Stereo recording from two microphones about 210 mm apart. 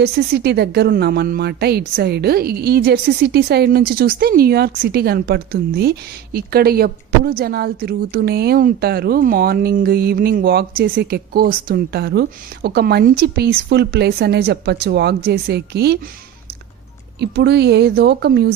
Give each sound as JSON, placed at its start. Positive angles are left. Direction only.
{"t": 0.0, "sound": "speech", "side_deg": -50}
{"t": 17.2, "sound": "speech", "side_deg": -50}